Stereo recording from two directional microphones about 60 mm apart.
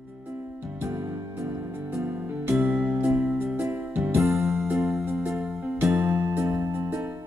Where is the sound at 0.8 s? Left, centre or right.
Right.